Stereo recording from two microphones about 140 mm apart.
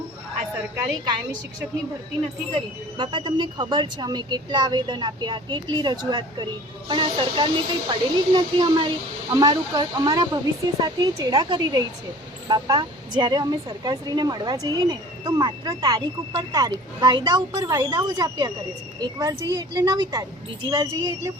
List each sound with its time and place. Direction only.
3.0 s a woman's voice: 35° right (ahead or behind)